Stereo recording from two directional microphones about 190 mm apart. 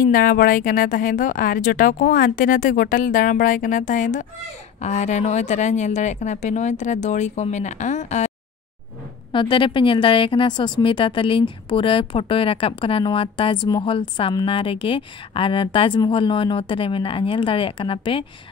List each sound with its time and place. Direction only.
0.0 s a woman's voice: 50° left (ahead or behind)
9.3 s speech: 25° left (ahead or behind)